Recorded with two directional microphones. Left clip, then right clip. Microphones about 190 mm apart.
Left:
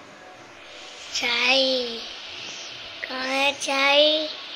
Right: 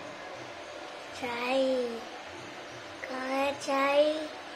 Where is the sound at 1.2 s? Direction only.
5° left (ahead or behind).